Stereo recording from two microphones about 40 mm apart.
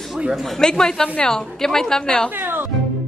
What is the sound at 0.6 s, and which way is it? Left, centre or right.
A woman's voice, centre.